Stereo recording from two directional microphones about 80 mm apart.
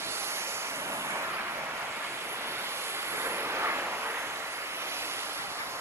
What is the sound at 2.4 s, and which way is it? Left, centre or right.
Vehicle, right.